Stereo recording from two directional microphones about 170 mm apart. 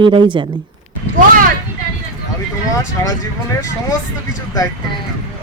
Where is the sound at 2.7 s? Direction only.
20° left (ahead or behind).